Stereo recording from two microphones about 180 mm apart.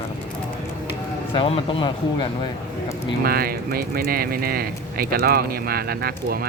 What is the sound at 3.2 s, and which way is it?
Speech, 55° right (ahead or behind).